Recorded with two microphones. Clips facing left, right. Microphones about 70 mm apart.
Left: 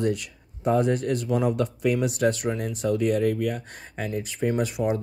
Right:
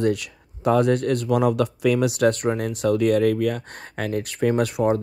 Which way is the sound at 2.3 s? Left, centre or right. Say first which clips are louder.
Right 4 dB; right.